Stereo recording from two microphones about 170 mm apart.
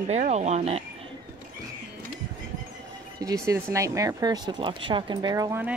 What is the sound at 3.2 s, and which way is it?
Speech, 20° right (ahead or behind).